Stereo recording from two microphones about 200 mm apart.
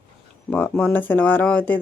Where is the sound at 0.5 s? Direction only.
10° left (ahead or behind).